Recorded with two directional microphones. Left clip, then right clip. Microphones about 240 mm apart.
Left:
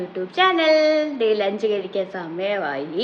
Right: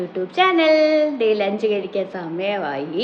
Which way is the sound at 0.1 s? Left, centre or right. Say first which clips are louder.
Right 1 dB; centre.